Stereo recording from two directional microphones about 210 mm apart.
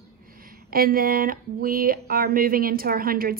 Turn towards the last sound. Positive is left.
turn(degrees=-45)  # may be behind; listen again after turning